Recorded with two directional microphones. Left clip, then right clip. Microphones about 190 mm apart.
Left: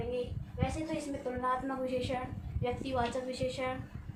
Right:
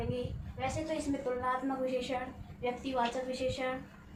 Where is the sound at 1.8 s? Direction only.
10° left (ahead or behind).